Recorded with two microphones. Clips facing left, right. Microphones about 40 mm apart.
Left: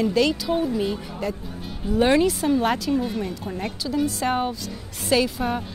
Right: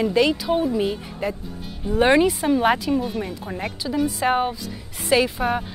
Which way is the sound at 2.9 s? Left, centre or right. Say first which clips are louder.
Right 1 dB; centre.